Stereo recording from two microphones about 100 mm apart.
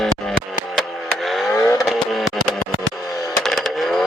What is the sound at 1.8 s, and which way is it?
Vehicle, centre (ahead or behind).